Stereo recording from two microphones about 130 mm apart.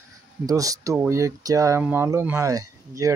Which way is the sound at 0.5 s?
25° right (ahead or behind).